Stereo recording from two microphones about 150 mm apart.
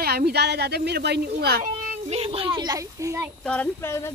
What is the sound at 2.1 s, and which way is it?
Speech, 40° right (ahead or behind).